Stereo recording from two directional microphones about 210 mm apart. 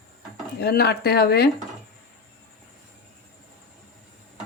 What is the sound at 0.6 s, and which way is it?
Speech, 50° left (ahead or behind).